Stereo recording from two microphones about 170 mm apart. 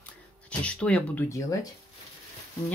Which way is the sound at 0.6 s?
5° left (ahead or behind).